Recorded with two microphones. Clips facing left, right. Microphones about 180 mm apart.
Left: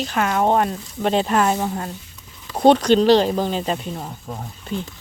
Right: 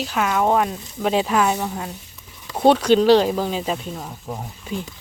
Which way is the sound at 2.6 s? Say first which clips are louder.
Left 1 dB; 5° right (ahead or behind).